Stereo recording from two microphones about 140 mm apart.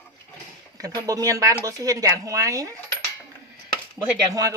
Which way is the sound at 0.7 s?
25° right (ahead or behind).